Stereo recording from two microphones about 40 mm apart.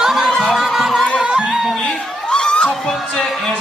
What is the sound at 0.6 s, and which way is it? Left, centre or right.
Music, centre.